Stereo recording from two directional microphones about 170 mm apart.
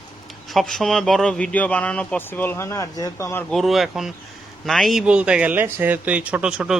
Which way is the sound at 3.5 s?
Centre (ahead or behind).